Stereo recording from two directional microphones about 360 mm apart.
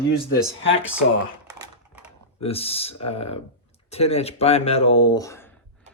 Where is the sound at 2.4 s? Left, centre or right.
Centre.